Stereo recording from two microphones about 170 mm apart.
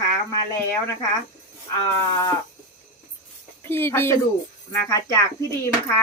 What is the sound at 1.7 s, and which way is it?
Sheep, 20° left (ahead or behind).